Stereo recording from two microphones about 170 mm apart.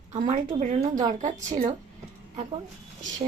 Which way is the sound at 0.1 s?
50° right (ahead or behind).